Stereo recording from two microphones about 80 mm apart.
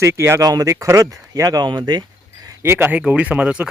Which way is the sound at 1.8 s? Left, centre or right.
Right.